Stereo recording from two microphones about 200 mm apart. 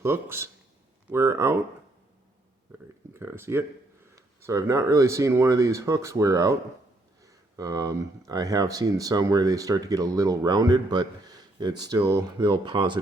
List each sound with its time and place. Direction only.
0.0 s speech: 10° right (ahead or behind)
3.1 s speech: 10° right (ahead or behind)